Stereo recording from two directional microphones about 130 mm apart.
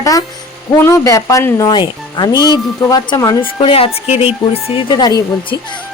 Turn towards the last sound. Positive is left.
turn(degrees=30)  # may be behind; listen again after turning